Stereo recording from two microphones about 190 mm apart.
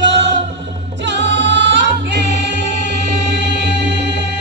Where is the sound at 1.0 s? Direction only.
65° right (ahead or behind).